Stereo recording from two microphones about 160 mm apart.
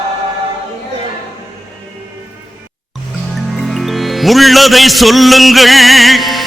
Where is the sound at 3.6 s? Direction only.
Centre (ahead or behind).